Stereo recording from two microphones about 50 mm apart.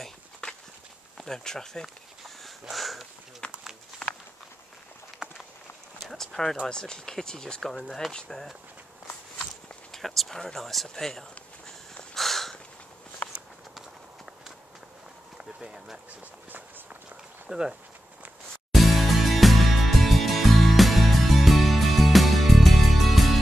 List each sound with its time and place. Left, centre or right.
1.1 s insect: centre
2.6 s speech: centre
4.0 s walk: centre
5.2 s walk: centre
6.0 s speech: centre
9.9 s a sound: centre
15.3 s a sound: centre
17.5 s speech: centre
18.7 s music: centre